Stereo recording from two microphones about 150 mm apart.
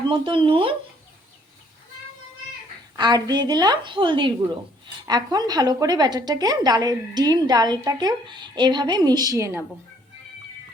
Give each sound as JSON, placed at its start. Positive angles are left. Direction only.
{"t": 0.1, "sound": "speech", "side_deg": -35}
{"t": 2.9, "sound": "a woman's voice", "side_deg": -30}